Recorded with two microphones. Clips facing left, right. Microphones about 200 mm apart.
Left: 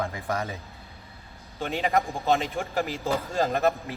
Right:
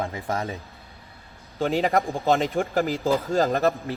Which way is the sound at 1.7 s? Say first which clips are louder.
Right 2 dB; 35° right (ahead or behind).